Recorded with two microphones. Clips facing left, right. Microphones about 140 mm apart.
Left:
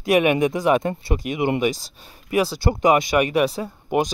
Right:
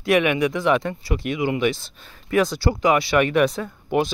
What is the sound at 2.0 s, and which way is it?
Speech, 15° left (ahead or behind).